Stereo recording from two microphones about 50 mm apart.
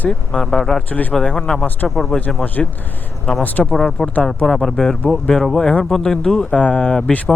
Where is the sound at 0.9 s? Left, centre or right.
Left.